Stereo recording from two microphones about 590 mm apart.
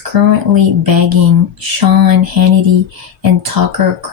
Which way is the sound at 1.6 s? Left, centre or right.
Right.